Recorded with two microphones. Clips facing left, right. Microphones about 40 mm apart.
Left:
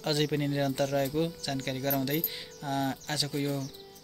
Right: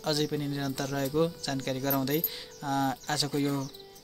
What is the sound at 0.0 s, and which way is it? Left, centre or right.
Speech, left.